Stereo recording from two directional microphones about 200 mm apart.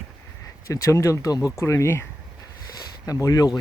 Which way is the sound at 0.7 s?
15° left (ahead or behind).